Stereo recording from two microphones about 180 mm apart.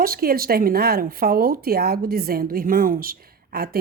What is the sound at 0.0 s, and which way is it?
Speech, 55° right (ahead or behind).